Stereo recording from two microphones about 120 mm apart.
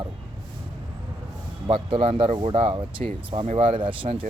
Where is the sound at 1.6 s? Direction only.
45° right (ahead or behind).